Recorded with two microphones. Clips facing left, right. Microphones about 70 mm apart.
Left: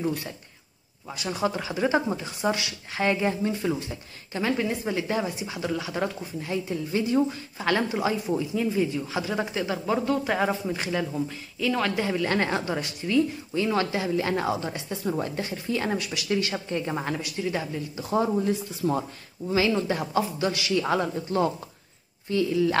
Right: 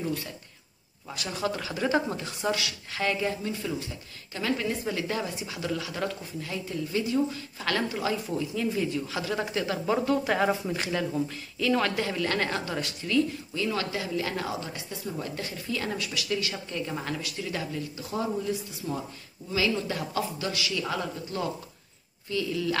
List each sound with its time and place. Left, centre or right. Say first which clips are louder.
0.0 s a woman's voice: left 3 dB; left
1.1 s a woman's voice: left 3 dB; centre
18.1 s speech: left 6 dB; left